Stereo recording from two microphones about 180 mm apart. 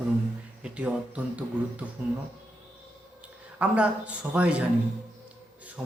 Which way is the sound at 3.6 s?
5° right (ahead or behind).